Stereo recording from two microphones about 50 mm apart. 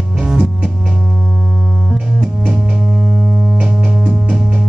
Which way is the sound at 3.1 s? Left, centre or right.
Right.